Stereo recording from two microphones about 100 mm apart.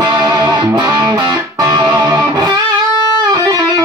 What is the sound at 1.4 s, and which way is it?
Music, 35° right (ahead or behind).